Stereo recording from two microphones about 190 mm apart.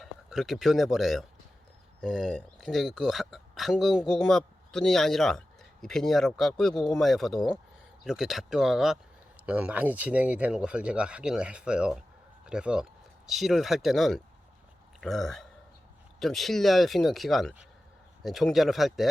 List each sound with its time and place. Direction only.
0.0 s speech: centre (ahead or behind)